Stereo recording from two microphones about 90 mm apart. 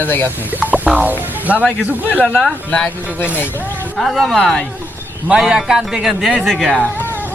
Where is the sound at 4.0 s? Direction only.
Centre (ahead or behind).